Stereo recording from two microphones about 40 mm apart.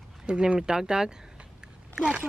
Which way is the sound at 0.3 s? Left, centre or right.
Right.